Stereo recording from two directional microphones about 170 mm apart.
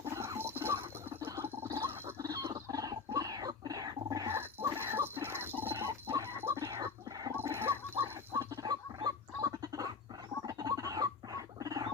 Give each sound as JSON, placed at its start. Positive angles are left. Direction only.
{"t": 0.0, "sound": "rodents", "side_deg": -15}
{"t": 1.2, "sound": "gargling", "side_deg": -15}
{"t": 10.4, "sound": "rodents", "side_deg": -20}